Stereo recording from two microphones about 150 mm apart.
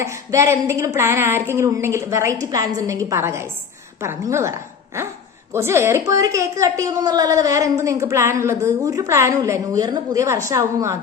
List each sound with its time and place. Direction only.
0.0 s a woman's voice: 20° right (ahead or behind)